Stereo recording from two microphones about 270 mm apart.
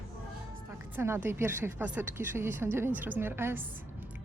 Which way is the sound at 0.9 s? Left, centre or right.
Centre.